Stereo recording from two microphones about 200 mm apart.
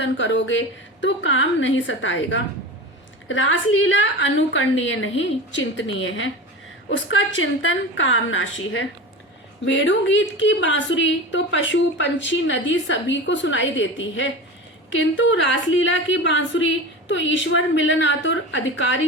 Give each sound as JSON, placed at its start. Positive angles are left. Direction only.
{"t": 0.0, "sound": "a woman's voice", "side_deg": 65}
{"t": 7.6, "sound": "a woman's voice", "side_deg": 75}